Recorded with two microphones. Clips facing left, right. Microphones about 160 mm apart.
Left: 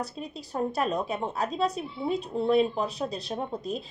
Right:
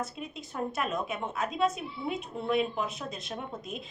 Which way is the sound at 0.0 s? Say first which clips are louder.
Left 2 dB; 35° left (ahead or behind).